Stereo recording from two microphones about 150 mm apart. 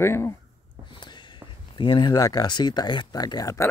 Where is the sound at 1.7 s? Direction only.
30° left (ahead or behind).